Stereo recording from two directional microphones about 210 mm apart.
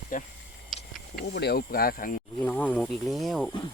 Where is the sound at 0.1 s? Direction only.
40° left (ahead or behind).